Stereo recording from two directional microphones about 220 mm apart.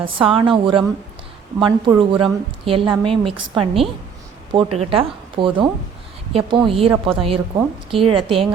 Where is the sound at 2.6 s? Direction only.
25° right (ahead or behind).